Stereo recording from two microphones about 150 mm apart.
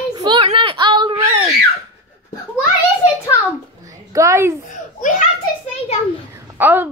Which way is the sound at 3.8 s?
20° right (ahead or behind).